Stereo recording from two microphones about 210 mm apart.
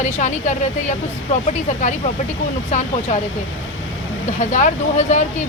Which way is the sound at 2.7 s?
35° left (ahead or behind).